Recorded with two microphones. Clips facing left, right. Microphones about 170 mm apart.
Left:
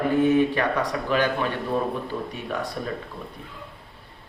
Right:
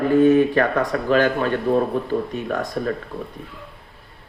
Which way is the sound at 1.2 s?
50° right (ahead or behind).